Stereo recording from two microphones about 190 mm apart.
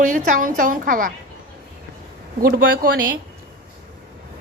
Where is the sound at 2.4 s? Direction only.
50° right (ahead or behind).